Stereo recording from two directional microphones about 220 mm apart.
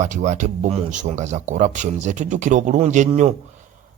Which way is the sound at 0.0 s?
35° right (ahead or behind).